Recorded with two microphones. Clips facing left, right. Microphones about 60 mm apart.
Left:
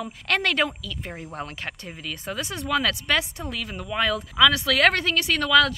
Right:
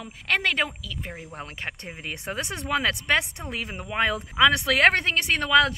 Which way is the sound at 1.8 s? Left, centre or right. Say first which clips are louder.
Even; right.